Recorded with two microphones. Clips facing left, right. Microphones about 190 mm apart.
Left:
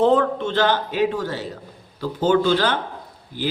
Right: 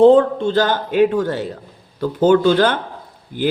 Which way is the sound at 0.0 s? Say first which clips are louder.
Right 7 dB; 30° right (ahead or behind).